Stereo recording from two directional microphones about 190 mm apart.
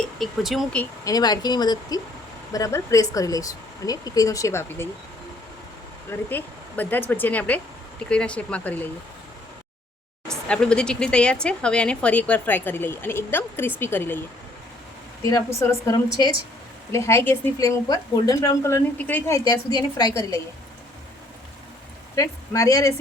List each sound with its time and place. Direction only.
0.2 s speech: centre (ahead or behind)
1.0 s a woman's voice: 20° left (ahead or behind)
6.1 s a woman's voice: 10° left (ahead or behind)
10.5 s a woman's voice: 5° left (ahead or behind)
15.2 s a woman's voice: 15° left (ahead or behind)
19.5 s speech: 20° left (ahead or behind)
22.1 s a woman's voice: 15° left (ahead or behind)